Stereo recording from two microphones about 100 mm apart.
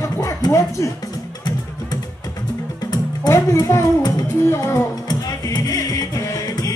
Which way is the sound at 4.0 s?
40° left (ahead or behind).